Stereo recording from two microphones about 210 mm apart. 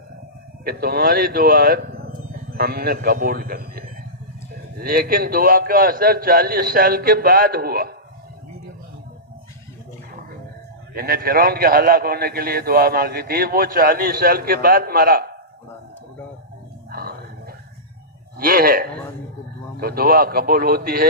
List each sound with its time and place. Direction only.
0.6 s a man's voice: 45° right (ahead or behind)
10.9 s a man's voice: 45° right (ahead or behind)
16.9 s a sound: 45° right (ahead or behind)
18.3 s a man's voice: 45° right (ahead or behind)